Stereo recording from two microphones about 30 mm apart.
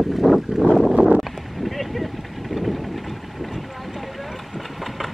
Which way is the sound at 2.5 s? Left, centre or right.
Centre.